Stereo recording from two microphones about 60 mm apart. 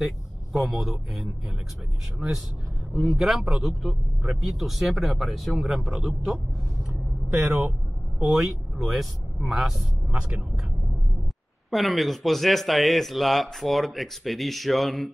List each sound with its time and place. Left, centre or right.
0.0 s speech: centre
2.9 s speech: centre
7.4 s speech: right
8.2 s speech: centre
11.7 s speech: centre